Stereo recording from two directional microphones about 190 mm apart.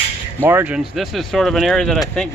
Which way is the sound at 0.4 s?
10° right (ahead or behind).